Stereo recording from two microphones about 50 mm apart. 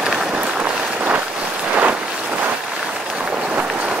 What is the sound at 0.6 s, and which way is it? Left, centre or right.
Boat, right.